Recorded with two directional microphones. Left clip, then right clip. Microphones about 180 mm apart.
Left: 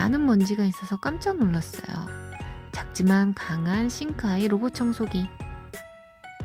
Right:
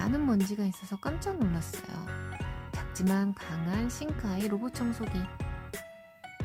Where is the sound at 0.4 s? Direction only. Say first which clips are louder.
Left 8 dB; 15° left (ahead or behind).